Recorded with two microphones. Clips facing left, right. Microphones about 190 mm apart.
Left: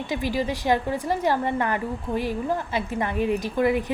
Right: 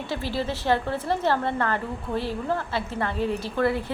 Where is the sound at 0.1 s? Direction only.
15° left (ahead or behind).